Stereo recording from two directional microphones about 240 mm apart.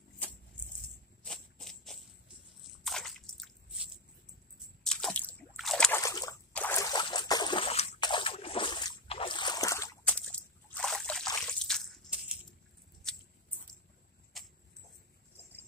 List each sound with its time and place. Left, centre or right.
1.2 s insect: centre
2.8 s squish: centre
4.8 s slosh: centre
11.6 s drip: centre
13.0 s a sound: centre